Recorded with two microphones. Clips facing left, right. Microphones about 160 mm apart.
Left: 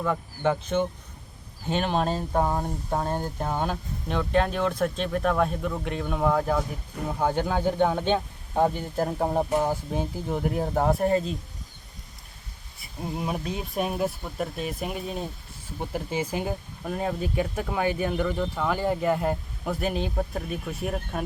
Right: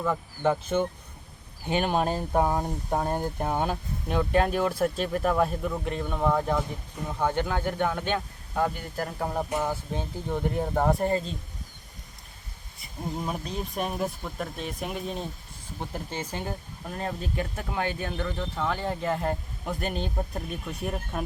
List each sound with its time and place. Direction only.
0.0 s speech: 5° right (ahead or behind); by 9.5 s 30° left (ahead or behind)
9.6 s speech: 10° left (ahead or behind)
13.1 s speech: 5° left (ahead or behind)